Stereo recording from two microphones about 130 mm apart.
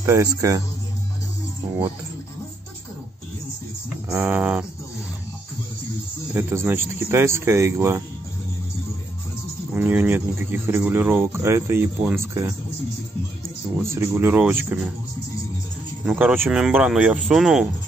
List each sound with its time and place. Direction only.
0.0 s speech: 25° right (ahead or behind)
4.1 s speech: 20° right (ahead or behind)
6.3 s speech: 15° right (ahead or behind)
9.8 s speech: 15° right (ahead or behind)
13.7 s speech: 20° right (ahead or behind)
16.1 s speech: 5° right (ahead or behind)